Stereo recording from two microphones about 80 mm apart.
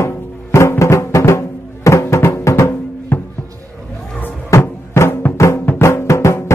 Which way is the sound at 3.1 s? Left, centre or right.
Left.